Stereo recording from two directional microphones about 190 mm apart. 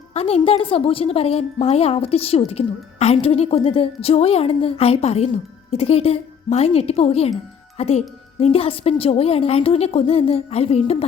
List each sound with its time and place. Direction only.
0.1 s a woman's voice: 30° left (ahead or behind)